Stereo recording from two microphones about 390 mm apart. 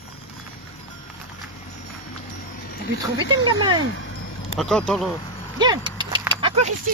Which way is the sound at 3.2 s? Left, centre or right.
Centre.